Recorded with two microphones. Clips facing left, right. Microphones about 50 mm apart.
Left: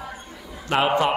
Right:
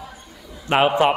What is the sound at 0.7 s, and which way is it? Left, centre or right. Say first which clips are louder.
Speech: right 4 dB; right.